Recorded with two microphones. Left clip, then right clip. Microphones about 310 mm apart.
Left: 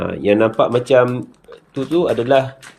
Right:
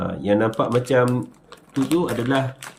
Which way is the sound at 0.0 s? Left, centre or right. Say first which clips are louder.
Left 5 dB; left.